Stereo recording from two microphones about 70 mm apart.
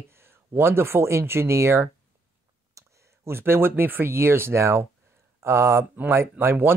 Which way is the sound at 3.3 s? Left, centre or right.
Right.